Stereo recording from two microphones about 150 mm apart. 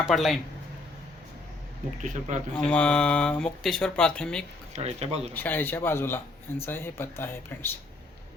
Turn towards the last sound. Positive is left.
turn(degrees=15)  # may be behind; listen again after turning